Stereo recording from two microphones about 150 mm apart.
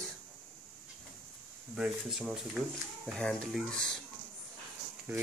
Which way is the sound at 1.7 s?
5° right (ahead or behind).